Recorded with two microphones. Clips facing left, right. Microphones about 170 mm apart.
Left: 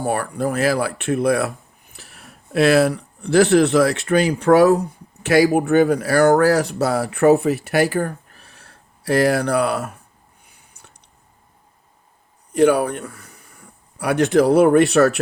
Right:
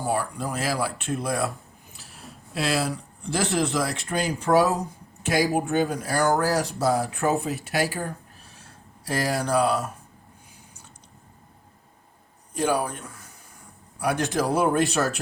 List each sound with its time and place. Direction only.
0.0 s speech: 60° left (ahead or behind)
12.5 s a man's voice: 65° left (ahead or behind)